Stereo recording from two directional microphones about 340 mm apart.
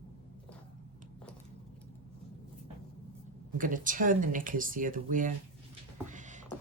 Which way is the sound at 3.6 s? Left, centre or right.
Right.